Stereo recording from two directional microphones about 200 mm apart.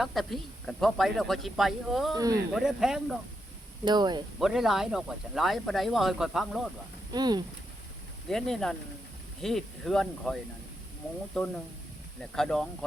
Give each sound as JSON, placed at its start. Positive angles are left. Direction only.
{"t": 0.0, "sound": "speech", "side_deg": 0}
{"t": 2.1, "sound": "speech", "side_deg": -20}
{"t": 2.6, "sound": "speech", "side_deg": -5}
{"t": 3.8, "sound": "speech", "side_deg": -20}
{"t": 4.4, "sound": "speech", "side_deg": 0}
{"t": 7.1, "sound": "speech", "side_deg": -20}
{"t": 8.3, "sound": "speech", "side_deg": 0}